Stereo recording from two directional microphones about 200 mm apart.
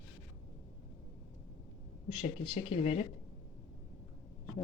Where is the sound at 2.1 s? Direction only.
25° left (ahead or behind).